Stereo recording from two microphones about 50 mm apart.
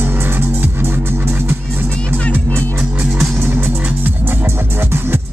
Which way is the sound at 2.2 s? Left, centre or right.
Left.